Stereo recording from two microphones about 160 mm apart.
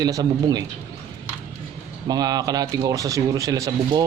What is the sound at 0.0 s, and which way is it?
Speech, 25° right (ahead or behind).